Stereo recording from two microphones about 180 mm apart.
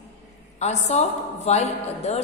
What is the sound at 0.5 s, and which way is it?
A woman's voice, 40° left (ahead or behind).